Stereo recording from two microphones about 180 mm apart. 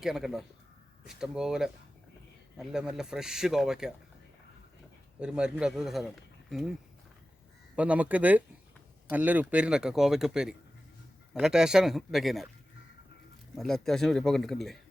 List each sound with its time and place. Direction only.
0.0 s speech: centre (ahead or behind)
5.2 s speech: 5° right (ahead or behind)
7.8 s speech: 10° right (ahead or behind)
13.6 s speech: centre (ahead or behind)